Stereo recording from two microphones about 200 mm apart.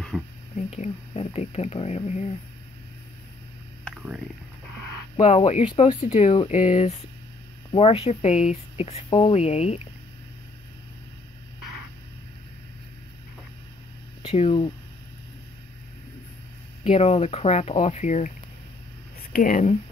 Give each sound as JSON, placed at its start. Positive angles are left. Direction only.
{"t": 0.1, "sound": "speech", "side_deg": 0}
{"t": 0.7, "sound": "speech", "side_deg": 30}
{"t": 3.8, "sound": "a sound", "side_deg": -5}
{"t": 5.1, "sound": "speech", "side_deg": 30}
{"t": 14.2, "sound": "speech", "side_deg": 30}
{"t": 16.8, "sound": "speech", "side_deg": 30}
{"t": 19.3, "sound": "speech", "side_deg": 40}